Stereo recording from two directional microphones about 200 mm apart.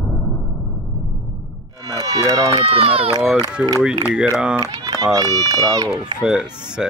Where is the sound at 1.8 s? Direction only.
20° right (ahead or behind).